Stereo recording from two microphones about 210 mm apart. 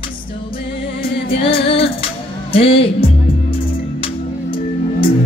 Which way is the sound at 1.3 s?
25° left (ahead or behind).